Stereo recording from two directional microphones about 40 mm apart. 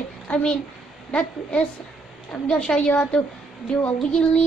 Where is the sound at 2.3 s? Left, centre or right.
Left.